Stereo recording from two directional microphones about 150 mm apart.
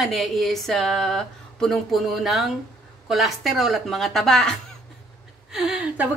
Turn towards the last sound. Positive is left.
turn(degrees=-5)  # may be behind; listen again after turning